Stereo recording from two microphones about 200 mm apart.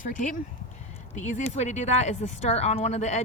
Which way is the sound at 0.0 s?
40° left (ahead or behind).